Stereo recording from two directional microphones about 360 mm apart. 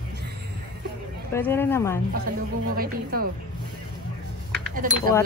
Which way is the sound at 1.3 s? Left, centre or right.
Centre.